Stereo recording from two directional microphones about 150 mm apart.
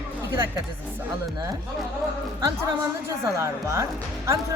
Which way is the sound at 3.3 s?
20° right (ahead or behind).